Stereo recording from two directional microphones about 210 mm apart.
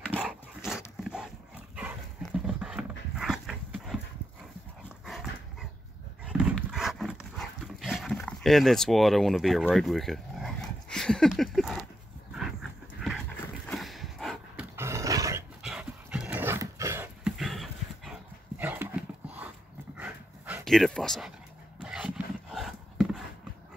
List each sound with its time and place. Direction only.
0.1 s dog: 5° right (ahead or behind)
5.0 s dog: centre (ahead or behind)
13.7 s a sound: centre (ahead or behind)
14.8 s dog: 15° right (ahead or behind)
15.6 s dog: 5° right (ahead or behind)